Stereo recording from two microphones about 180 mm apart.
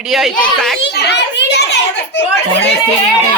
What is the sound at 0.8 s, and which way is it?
Children playing, 70° left (ahead or behind).